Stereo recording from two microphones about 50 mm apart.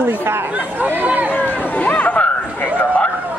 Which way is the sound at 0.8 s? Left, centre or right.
Right.